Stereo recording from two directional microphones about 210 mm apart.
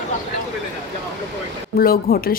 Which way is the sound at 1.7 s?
45° left (ahead or behind).